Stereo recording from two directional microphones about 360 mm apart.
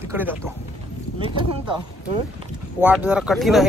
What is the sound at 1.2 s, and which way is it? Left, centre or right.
Speech, centre.